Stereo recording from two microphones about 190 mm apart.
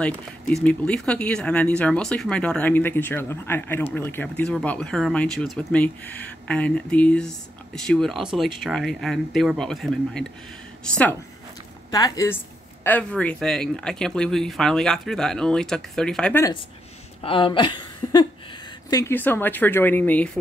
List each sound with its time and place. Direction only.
0.7 s a woman's voice: 5° left (ahead or behind)
17.2 s a woman's voice: 25° left (ahead or behind); by 20.2 s 10° left (ahead or behind)